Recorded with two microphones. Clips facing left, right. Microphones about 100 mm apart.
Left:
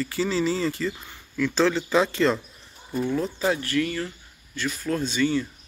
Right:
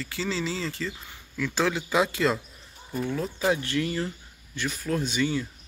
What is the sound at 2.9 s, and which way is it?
Speech, centre (ahead or behind).